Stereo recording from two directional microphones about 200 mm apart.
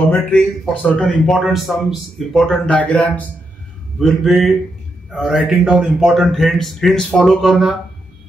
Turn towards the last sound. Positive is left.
turn(degrees=0)  # may be behind; listen again after turning